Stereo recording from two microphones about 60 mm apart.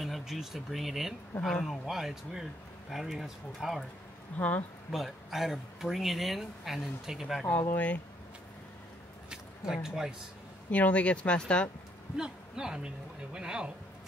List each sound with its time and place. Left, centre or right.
0.2 s speech: centre
4.4 s speech: left
4.9 s speech: centre
7.4 s speech: left
9.3 s speech: centre
10.7 s speech: left
12.2 s speech: centre